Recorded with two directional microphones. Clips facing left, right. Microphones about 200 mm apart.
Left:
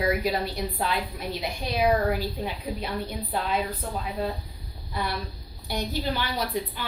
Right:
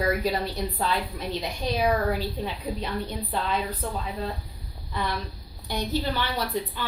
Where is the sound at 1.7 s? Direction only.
10° left (ahead or behind).